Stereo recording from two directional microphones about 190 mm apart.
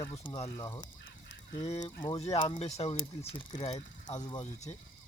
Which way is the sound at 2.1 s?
25° left (ahead or behind).